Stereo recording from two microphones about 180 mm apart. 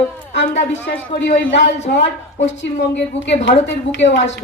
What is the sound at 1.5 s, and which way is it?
Speech, 75° left (ahead or behind).